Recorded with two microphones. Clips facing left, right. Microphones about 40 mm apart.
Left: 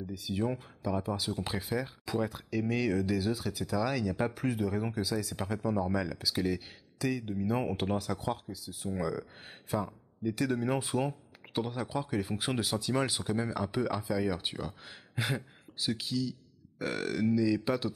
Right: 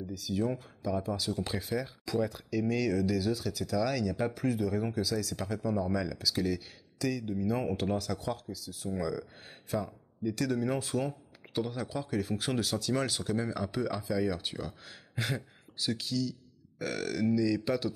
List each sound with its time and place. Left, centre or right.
0.1 s speech: left